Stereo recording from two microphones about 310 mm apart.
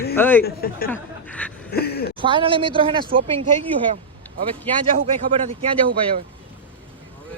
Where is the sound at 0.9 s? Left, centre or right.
Centre.